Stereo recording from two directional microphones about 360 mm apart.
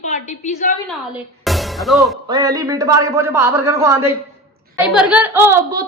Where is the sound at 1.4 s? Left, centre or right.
Centre.